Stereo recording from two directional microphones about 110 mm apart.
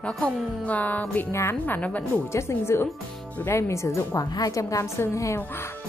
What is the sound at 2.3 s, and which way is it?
A woman's voice, 25° left (ahead or behind).